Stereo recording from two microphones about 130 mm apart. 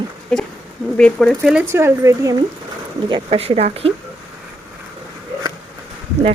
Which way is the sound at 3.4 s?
50° right (ahead or behind).